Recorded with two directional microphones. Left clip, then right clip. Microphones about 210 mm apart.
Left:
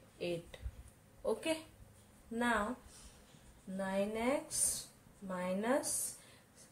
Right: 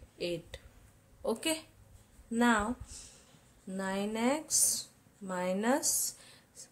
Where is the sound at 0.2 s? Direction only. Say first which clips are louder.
Right 4 dB; 50° right (ahead or behind).